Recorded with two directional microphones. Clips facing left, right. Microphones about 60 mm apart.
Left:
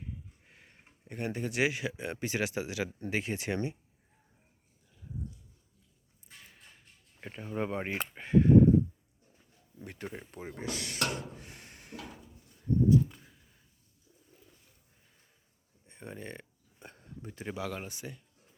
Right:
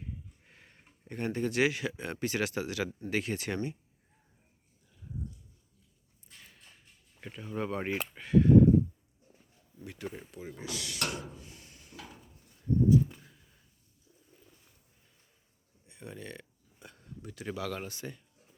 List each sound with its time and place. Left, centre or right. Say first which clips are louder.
0.0 s a sound: even; centre
1.0 s speech: right 3 dB; centre
7.2 s speech: left 1 dB; left
9.8 s speech: right 1 dB; left
15.9 s a sound: left 1 dB; left
17.4 s speech: right 1 dB; centre